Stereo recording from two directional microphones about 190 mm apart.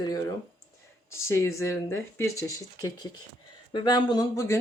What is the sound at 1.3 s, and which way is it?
Speech, 15° left (ahead or behind).